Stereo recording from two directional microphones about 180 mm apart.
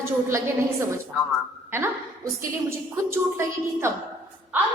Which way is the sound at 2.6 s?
15° right (ahead or behind).